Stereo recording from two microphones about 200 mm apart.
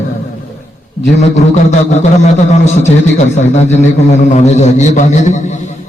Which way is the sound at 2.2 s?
35° left (ahead or behind).